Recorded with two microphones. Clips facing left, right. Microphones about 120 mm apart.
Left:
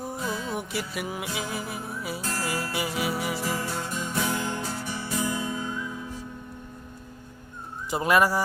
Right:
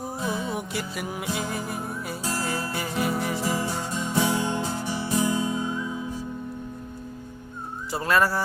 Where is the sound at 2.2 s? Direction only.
15° right (ahead or behind).